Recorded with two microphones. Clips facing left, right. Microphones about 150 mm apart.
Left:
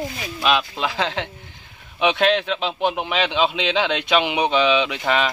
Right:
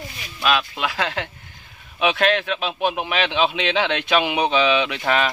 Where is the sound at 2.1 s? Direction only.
20° left (ahead or behind).